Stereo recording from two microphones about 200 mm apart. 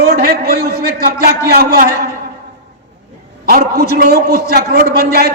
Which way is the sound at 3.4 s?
50° right (ahead or behind).